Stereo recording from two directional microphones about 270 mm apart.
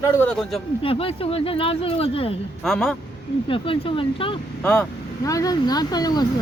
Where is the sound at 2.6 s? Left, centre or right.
Centre.